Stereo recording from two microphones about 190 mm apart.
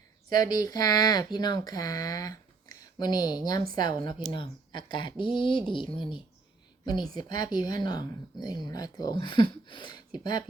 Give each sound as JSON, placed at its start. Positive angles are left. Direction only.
{"t": 0.3, "sound": "speech", "side_deg": 20}
{"t": 6.8, "sound": "speech", "side_deg": 20}